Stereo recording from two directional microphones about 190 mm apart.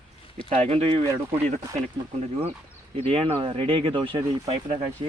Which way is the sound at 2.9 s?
30° right (ahead or behind).